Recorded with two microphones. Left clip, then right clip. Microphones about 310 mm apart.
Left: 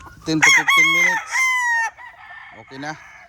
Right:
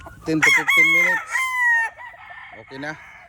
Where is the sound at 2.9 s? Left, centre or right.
Left.